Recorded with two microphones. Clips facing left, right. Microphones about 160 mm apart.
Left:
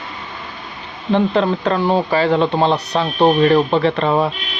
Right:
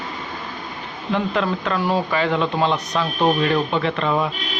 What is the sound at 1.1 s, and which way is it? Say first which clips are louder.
Speech: left 6 dB; 30° left (ahead or behind).